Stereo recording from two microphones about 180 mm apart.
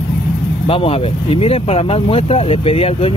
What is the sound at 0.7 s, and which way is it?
Speech, 30° left (ahead or behind).